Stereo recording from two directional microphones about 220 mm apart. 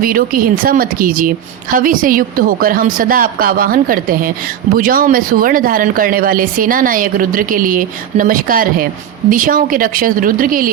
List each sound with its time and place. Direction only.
0.0 s speech: 40° right (ahead or behind)